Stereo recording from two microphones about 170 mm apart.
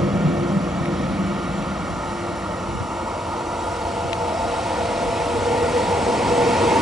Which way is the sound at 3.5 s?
Centre (ahead or behind).